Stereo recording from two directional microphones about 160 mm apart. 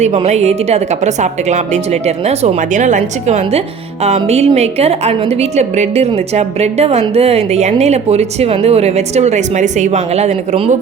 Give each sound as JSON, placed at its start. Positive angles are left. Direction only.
{"t": 0.0, "sound": "a woman's voice", "side_deg": -45}